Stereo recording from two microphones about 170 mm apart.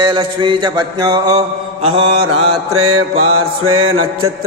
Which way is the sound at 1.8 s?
30° right (ahead or behind).